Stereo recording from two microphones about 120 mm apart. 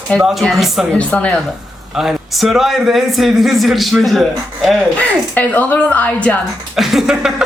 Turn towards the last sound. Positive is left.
turn(degrees=-5)  # may be behind; listen again after turning